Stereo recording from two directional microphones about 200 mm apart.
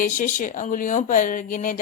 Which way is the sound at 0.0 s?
40° left (ahead or behind).